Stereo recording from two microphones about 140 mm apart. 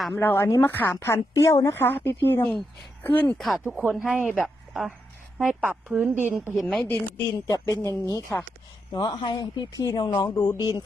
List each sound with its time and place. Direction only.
0.2 s a woman's voice: 15° left (ahead or behind)
3.3 s speech: centre (ahead or behind)
3.6 s speech: 10° right (ahead or behind)
6.6 s speech: centre (ahead or behind)
7.3 s speech: 25° left (ahead or behind)